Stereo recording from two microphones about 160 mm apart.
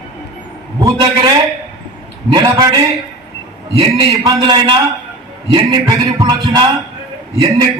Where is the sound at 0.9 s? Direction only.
25° right (ahead or behind).